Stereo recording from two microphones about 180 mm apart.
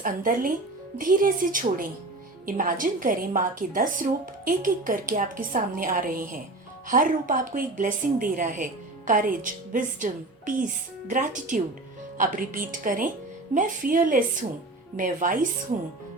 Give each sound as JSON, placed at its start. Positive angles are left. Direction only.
{"t": 0.0, "sound": "speech", "side_deg": -50}